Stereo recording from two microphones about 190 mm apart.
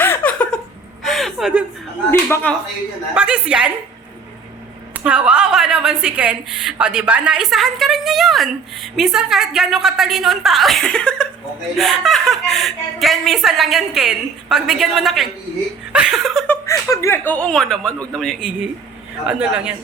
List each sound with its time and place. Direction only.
0.0 s a sound: 10° left (ahead or behind)
2.0 s speech: 10° left (ahead or behind)
3.2 s a woman's voice: 5° right (ahead or behind)
4.9 s a woman's voice: 5° right (ahead or behind)
16.5 s a woman's voice: 15° left (ahead or behind); by 19.7 s 5° right (ahead or behind)